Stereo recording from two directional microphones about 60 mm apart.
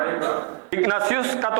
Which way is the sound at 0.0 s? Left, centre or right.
Right.